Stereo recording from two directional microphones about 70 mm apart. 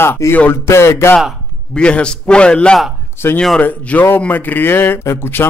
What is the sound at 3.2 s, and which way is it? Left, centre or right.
Speech, left.